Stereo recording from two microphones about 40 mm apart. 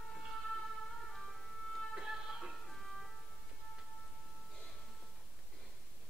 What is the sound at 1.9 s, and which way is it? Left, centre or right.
Music, centre.